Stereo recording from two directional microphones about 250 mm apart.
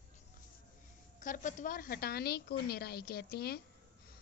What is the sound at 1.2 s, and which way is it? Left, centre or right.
A woman's voice, left.